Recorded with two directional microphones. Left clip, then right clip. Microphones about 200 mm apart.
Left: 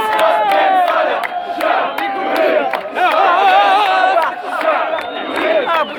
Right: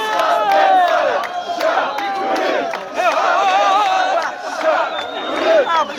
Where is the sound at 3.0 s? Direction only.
35° left (ahead or behind).